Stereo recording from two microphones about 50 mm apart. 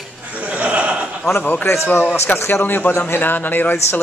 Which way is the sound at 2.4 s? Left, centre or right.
Left.